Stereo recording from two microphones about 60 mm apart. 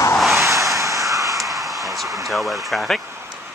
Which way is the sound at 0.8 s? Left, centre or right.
Right.